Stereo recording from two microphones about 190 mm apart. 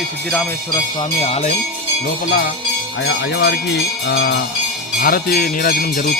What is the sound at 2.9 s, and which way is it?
Speech, 70° left (ahead or behind).